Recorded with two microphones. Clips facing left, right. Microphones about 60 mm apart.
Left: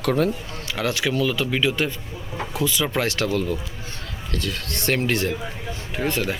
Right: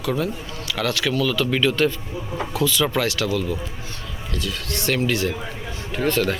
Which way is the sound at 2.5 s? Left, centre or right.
Left.